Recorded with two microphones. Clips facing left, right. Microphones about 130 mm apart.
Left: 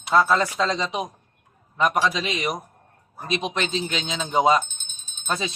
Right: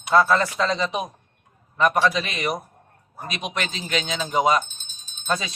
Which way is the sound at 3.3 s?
25° left (ahead or behind).